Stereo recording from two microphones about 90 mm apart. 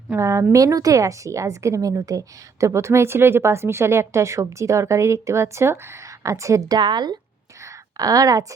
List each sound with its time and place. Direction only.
0.2 s a woman's voice: 35° right (ahead or behind)
6.7 s speech: 55° right (ahead or behind)
7.6 s a sound: 40° right (ahead or behind)